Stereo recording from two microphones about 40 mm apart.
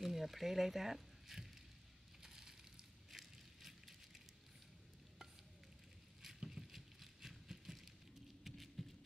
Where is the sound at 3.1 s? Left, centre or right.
Centre.